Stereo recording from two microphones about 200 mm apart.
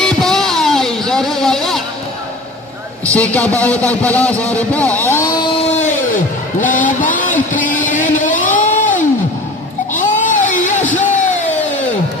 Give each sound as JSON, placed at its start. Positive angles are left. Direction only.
{"t": 0.0, "sound": "music", "side_deg": 0}
{"t": 3.1, "sound": "a man's voice", "side_deg": 5}
{"t": 5.5, "sound": "music", "side_deg": 35}
{"t": 9.9, "sound": "a sound", "side_deg": 40}